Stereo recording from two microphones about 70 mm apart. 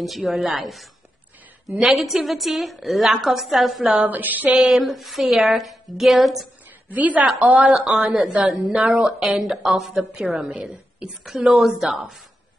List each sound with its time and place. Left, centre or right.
0.0 s a woman's voice: centre
2.0 s a woman's voice: centre
3.9 s a sound: right
4.6 s a woman's voice: centre
6.9 s a sound: right
7.9 s a woman's voice: centre
9.0 s a woman's voice: centre
10.4 s a woman's voice: centre